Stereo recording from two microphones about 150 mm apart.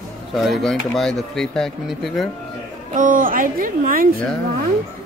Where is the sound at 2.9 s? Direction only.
65° right (ahead or behind).